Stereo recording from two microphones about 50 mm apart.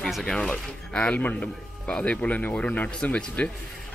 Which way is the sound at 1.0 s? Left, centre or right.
Left.